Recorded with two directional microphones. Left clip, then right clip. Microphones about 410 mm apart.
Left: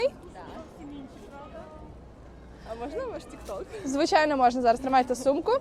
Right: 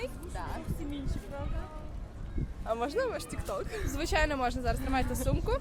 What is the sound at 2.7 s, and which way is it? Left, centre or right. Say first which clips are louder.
Speech: right 3 dB; right.